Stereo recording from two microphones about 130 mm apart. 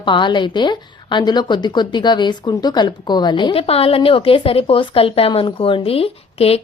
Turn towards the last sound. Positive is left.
turn(degrees=50)  # may be behind; listen again after turning